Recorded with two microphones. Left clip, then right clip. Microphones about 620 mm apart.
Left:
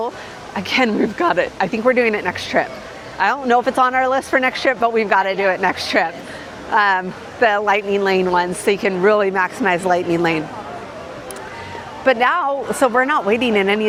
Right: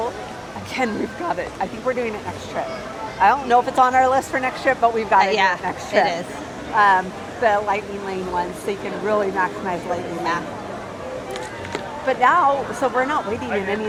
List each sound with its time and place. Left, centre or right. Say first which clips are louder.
0.7 s a woman's voice: left 7 dB; left
3.2 s a woman's voice: even; left
12.0 s a woman's voice: left 1 dB; left